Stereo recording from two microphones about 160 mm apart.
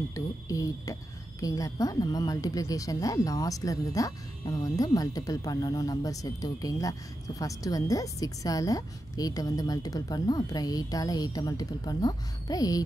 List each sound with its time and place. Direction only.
0.1 s speech: 20° left (ahead or behind)